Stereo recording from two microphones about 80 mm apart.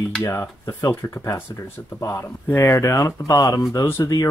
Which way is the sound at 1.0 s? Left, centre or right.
Left.